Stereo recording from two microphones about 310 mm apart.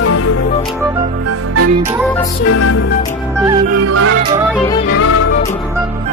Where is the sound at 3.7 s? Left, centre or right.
Right.